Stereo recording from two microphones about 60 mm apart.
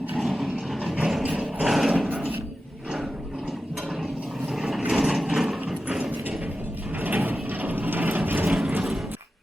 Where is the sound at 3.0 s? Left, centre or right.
Centre.